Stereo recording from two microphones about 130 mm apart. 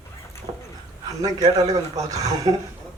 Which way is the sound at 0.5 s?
50° right (ahead or behind).